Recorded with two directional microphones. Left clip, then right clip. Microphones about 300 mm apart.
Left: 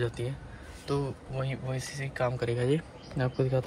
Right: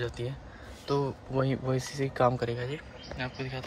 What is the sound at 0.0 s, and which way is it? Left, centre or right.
Speech, centre.